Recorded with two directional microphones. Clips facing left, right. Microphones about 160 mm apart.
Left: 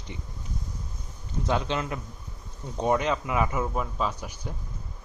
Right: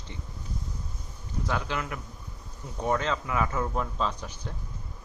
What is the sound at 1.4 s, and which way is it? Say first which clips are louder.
Speech: left 4 dB; 25° left (ahead or behind).